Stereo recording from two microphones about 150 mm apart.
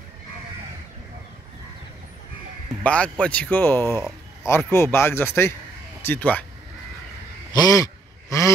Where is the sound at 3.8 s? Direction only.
20° right (ahead or behind).